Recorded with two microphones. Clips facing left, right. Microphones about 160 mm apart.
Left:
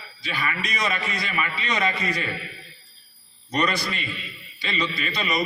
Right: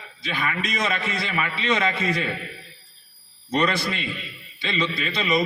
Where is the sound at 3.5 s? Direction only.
25° right (ahead or behind).